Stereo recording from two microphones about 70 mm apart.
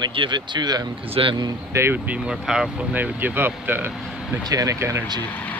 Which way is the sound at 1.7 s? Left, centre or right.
Right.